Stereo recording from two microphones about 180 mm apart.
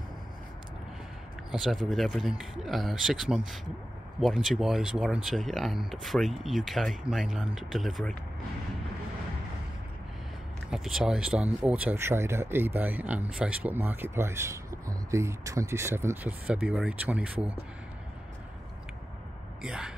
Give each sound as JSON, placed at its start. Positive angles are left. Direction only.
{"t": 1.5, "sound": "speech", "side_deg": 0}
{"t": 10.7, "sound": "speech", "side_deg": 0}
{"t": 19.6, "sound": "speech", "side_deg": -5}